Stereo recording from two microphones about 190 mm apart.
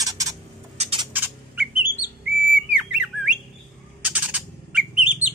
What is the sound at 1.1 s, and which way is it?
Bird, 10° right (ahead or behind).